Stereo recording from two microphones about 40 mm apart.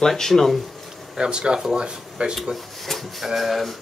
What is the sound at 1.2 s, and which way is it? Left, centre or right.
Speech, right.